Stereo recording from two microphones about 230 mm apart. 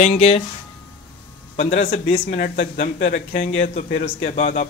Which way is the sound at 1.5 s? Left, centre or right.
Left.